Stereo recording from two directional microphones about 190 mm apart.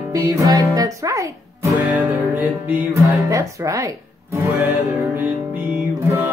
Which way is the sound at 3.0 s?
15° right (ahead or behind).